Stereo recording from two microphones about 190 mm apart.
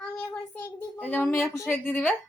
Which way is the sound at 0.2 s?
10° left (ahead or behind).